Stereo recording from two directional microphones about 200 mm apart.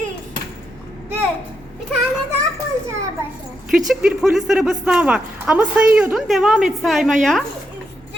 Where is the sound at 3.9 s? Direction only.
Centre (ahead or behind).